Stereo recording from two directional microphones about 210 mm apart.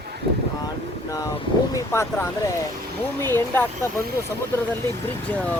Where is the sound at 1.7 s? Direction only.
15° left (ahead or behind).